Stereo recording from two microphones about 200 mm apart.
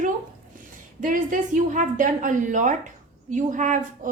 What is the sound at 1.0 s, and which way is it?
A woman's voice, 40° right (ahead or behind).